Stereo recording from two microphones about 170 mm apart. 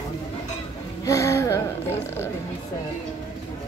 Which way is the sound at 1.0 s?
20° left (ahead or behind).